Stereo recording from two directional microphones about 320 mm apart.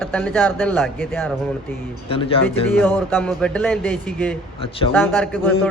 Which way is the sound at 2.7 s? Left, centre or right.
Centre.